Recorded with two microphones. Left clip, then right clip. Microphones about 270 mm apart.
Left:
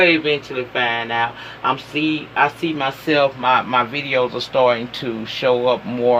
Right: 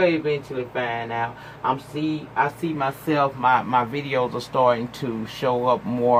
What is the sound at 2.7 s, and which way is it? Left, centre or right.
Speech, right.